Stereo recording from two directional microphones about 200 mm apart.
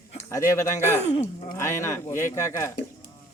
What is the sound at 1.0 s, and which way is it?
Speech, 35° left (ahead or behind).